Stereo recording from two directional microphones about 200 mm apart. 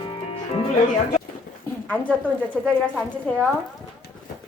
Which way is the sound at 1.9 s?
5° left (ahead or behind).